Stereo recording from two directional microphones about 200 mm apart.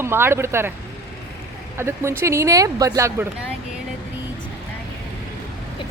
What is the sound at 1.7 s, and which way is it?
Speech, 15° right (ahead or behind).